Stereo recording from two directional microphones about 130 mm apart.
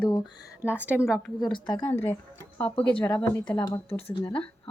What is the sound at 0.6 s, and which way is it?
Speech, 10° right (ahead or behind).